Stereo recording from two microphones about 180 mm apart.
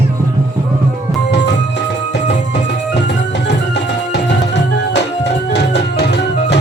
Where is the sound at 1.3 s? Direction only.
75° left (ahead or behind).